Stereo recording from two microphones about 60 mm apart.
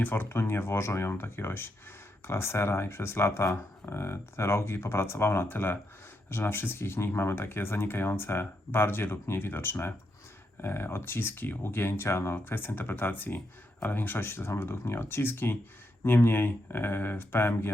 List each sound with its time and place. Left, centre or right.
0.0 s speech: left